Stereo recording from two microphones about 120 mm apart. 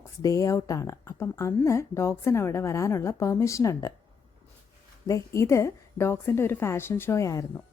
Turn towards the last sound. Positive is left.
turn(degrees=25)  # may be behind; listen again after turning